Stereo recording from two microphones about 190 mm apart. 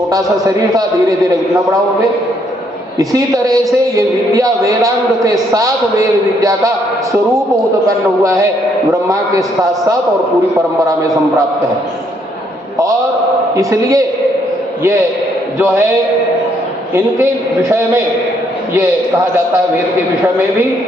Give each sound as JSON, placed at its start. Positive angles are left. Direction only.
{"t": 0.1, "sound": "a man's voice", "side_deg": -20}
{"t": 3.0, "sound": "a man's voice", "side_deg": -20}
{"t": 7.9, "sound": "a man's voice", "side_deg": -15}
{"t": 10.5, "sound": "a man's voice", "side_deg": -15}
{"t": 13.6, "sound": "a man's voice", "side_deg": -15}
{"t": 15.5, "sound": "a man's voice", "side_deg": -10}